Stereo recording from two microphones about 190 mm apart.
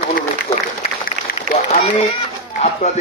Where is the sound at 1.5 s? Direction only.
40° right (ahead or behind).